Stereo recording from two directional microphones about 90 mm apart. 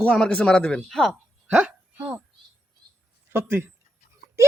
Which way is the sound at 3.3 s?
25° right (ahead or behind).